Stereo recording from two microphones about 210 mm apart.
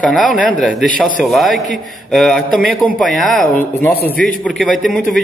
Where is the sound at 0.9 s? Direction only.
40° left (ahead or behind).